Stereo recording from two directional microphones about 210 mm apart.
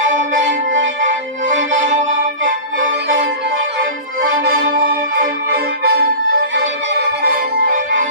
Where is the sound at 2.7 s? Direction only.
55° right (ahead or behind).